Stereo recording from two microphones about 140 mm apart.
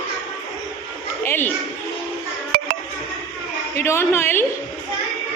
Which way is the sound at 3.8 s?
20° left (ahead or behind).